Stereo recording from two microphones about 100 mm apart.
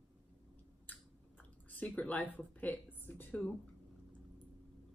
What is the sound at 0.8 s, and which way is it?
Chewing, 15° left (ahead or behind).